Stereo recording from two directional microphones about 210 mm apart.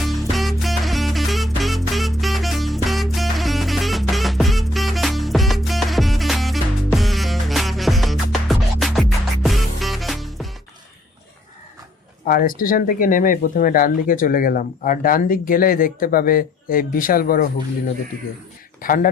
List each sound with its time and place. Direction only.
0.0 s music: centre (ahead or behind)
12.2 s speech: 40° left (ahead or behind)
18.8 s speech: 40° left (ahead or behind)